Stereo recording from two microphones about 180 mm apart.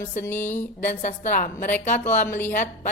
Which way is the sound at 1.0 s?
45° left (ahead or behind).